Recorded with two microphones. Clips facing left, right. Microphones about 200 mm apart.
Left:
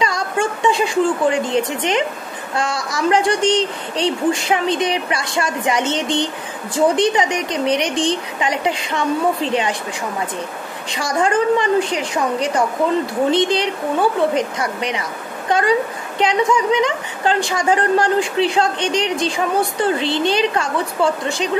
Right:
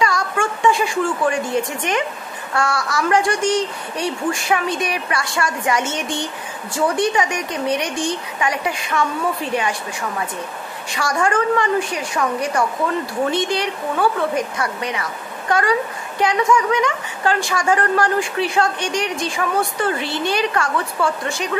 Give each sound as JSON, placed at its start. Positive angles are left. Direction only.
{"t": 0.0, "sound": "a woman's voice", "side_deg": 20}
{"t": 10.9, "sound": "a woman's voice", "side_deg": 20}